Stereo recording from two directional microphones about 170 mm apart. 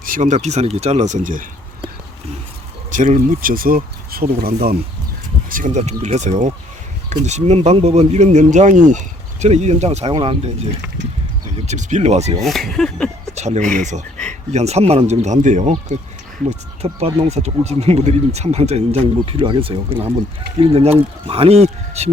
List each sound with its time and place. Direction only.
0.0 s speech: 50° right (ahead or behind)
0.4 s speech: 40° right (ahead or behind)
2.9 s speech: 45° right (ahead or behind); by 4.8 s 65° right (ahead or behind)
5.5 s speech: 50° right (ahead or behind)
10.1 s speech: 30° right (ahead or behind)
11.6 s speech: 45° right (ahead or behind)
12.4 s speech: centre (ahead or behind)
13.3 s speech: 40° right (ahead or behind)